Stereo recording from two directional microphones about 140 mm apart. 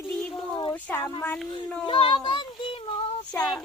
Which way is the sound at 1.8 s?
35° left (ahead or behind).